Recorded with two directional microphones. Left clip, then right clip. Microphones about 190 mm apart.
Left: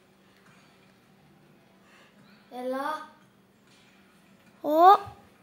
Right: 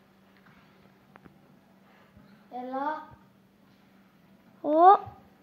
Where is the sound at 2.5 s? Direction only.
65° left (ahead or behind).